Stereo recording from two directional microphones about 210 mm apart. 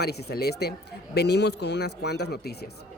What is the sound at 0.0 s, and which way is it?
A man's voice, 50° left (ahead or behind).